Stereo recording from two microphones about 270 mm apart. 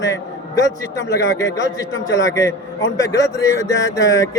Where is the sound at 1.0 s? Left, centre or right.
Left.